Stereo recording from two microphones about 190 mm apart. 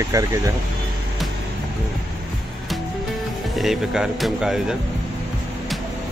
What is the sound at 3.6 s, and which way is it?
Speech, centre (ahead or behind).